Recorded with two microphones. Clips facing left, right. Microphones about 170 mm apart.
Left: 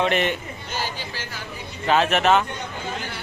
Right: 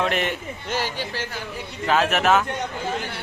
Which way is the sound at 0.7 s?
70° right (ahead or behind).